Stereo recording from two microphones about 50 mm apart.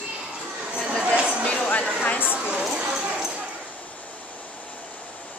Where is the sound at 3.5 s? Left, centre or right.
Left.